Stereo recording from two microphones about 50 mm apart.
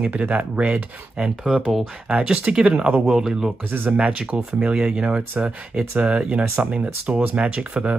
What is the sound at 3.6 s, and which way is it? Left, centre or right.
Speech, right.